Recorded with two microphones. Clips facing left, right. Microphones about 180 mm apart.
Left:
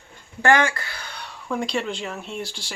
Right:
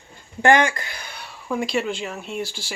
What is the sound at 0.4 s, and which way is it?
Speech, 20° right (ahead or behind).